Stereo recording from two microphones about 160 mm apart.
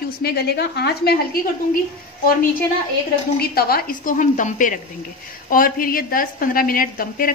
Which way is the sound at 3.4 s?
75° left (ahead or behind).